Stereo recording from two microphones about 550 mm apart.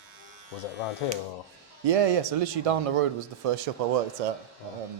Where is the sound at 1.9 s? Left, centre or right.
Right.